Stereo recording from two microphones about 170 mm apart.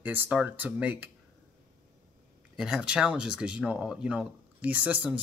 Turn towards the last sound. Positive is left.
turn(degrees=-10)  # may be behind; listen again after turning